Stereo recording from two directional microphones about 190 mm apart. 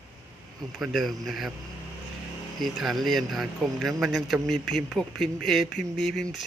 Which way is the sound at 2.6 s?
Centre (ahead or behind).